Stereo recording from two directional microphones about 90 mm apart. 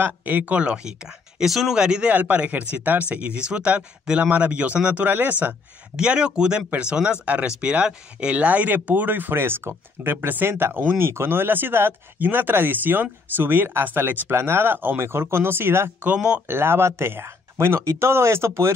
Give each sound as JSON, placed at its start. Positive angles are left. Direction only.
{"t": 0.0, "sound": "speech", "side_deg": -20}
{"t": 16.1, "sound": "speech", "side_deg": -10}
{"t": 16.4, "sound": "speech", "side_deg": -25}